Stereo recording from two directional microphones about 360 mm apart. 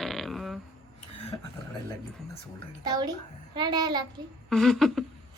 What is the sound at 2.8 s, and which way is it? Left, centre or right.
A child's voice, centre.